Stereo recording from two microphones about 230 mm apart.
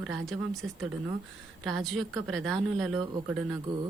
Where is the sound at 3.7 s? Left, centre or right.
Centre.